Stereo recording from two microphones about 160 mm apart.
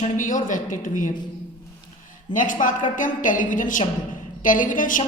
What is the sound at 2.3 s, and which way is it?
A woman's voice, 55° left (ahead or behind).